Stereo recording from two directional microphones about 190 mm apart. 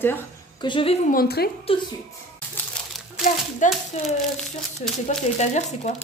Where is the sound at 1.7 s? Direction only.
30° left (ahead or behind).